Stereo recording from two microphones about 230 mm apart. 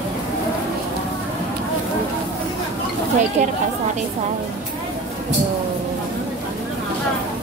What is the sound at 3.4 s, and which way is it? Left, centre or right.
Speech, right.